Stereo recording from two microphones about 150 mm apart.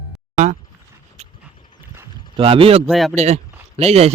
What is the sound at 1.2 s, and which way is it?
Horse, 50° right (ahead or behind).